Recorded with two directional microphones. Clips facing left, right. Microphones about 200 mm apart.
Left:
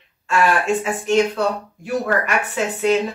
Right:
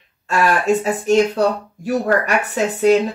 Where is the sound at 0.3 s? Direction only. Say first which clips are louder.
Right 2 dB; 40° right (ahead or behind).